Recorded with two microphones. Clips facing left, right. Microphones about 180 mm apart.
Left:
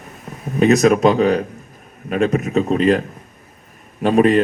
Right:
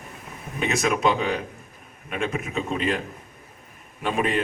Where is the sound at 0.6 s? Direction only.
40° left (ahead or behind).